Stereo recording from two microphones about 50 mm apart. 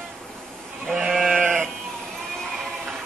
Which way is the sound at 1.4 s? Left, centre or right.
Right.